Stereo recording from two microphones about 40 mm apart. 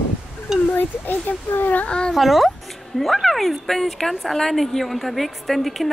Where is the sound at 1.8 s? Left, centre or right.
Left.